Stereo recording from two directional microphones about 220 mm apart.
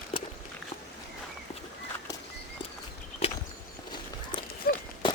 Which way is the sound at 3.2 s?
25° left (ahead or behind).